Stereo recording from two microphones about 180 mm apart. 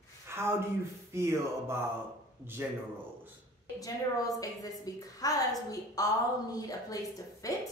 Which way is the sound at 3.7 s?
20° left (ahead or behind).